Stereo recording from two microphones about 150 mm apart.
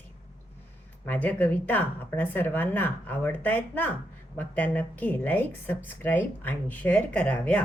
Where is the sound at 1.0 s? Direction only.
10° left (ahead or behind).